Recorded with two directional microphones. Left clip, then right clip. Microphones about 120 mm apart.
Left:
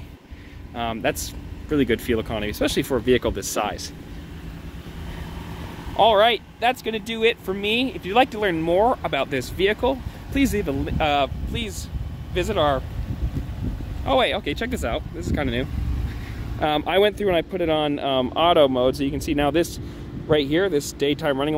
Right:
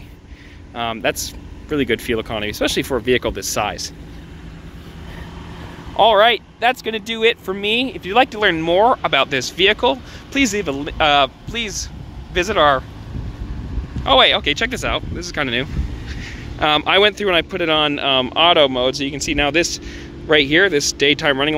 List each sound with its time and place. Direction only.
0.7 s speech: 20° left (ahead or behind)
1.7 s speech: 30° left (ahead or behind)
5.9 s speech: 5° right (ahead or behind)
14.0 s speech: centre (ahead or behind); by 18.9 s 30° left (ahead or behind)
18.9 s speech: 45° left (ahead or behind)
20.2 s speech: 10° left (ahead or behind)